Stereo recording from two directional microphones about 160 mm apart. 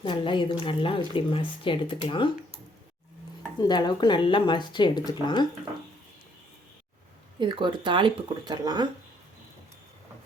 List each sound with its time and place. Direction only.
0.0 s speech: 30° left (ahead or behind)
3.6 s speech: 25° left (ahead or behind)
7.3 s speech: 30° right (ahead or behind)